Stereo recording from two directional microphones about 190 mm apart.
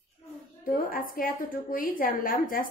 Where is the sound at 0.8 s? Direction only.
50° left (ahead or behind).